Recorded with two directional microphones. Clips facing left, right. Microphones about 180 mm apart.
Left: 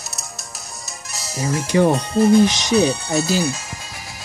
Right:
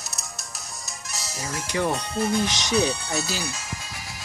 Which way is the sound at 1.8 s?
40° left (ahead or behind).